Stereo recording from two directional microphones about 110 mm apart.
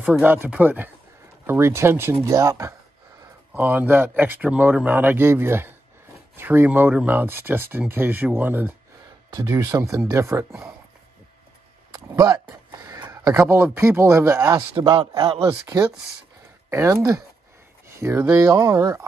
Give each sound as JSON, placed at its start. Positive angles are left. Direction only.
{"t": 0.2, "sound": "speech", "side_deg": -15}
{"t": 3.5, "sound": "speech", "side_deg": -20}
{"t": 9.3, "sound": "speech", "side_deg": -30}
{"t": 11.9, "sound": "a sound", "side_deg": -40}
{"t": 13.3, "sound": "speech", "side_deg": -20}